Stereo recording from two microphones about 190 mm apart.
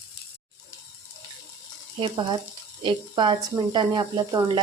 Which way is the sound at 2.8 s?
25° right (ahead or behind).